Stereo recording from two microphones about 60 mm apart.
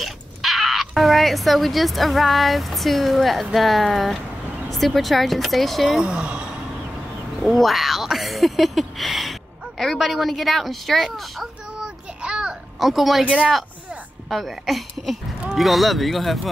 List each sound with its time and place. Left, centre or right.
0.0 s speech: centre
5.9 s speech: centre
7.4 s speech: centre
11.8 s child singing: centre
12.7 s speech: centre
13.2 s speech: right
14.3 s speech: centre